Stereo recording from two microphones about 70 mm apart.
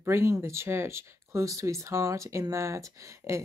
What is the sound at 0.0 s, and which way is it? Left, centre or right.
Speech, right.